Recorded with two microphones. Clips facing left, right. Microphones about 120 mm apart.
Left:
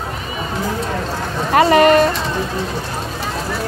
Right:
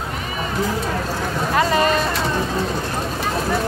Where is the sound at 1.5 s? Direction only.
75° left (ahead or behind).